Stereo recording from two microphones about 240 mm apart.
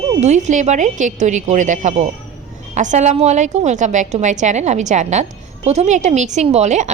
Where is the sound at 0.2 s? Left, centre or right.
Right.